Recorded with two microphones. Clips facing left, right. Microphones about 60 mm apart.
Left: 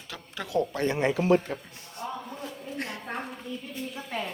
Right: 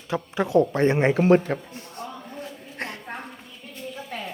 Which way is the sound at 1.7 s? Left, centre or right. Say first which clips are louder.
Even; right.